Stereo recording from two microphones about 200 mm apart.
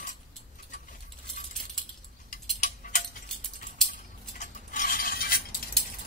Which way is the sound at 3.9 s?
40° left (ahead or behind).